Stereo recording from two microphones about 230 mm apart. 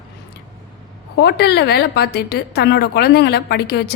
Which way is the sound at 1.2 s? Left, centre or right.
Left.